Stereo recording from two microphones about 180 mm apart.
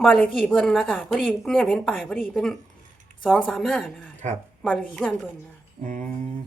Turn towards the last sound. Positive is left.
turn(degrees=-45)  # may be behind; listen again after turning